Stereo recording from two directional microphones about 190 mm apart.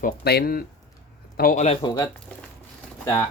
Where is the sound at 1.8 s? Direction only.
20° left (ahead or behind).